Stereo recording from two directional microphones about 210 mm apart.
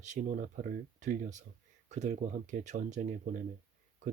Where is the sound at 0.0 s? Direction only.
35° right (ahead or behind).